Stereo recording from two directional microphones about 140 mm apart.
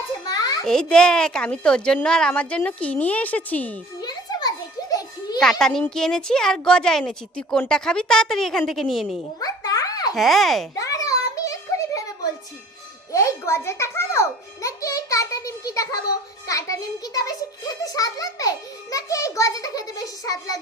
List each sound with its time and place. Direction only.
0.3 s a sound: 25° left (ahead or behind)
0.6 s speech: 5° left (ahead or behind)
4.0 s children playing: 30° left (ahead or behind)
5.4 s a woman's voice: 5° left (ahead or behind)
9.4 s a sound: 25° left (ahead or behind)
10.2 s a woman's voice: centre (ahead or behind)
10.8 s a sound: 25° left (ahead or behind)
13.1 s music: 20° left (ahead or behind)
16.5 s a child's voice: 25° left (ahead or behind)